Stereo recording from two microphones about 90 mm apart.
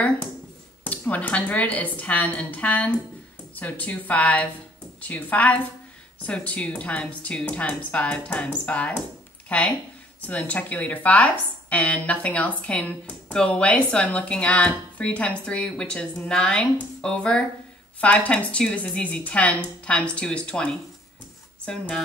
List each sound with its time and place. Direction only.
0.8 s speech: 20° left (ahead or behind)